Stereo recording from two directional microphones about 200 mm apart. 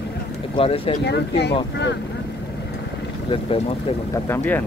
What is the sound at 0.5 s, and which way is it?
Speech, 25° left (ahead or behind).